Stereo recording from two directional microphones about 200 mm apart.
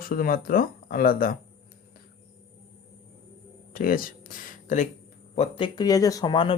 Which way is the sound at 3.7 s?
45° left (ahead or behind).